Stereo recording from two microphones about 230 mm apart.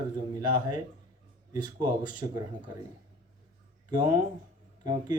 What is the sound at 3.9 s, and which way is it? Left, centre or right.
Speech, centre.